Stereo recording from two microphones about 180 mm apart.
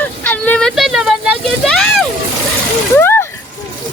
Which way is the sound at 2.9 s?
15° left (ahead or behind).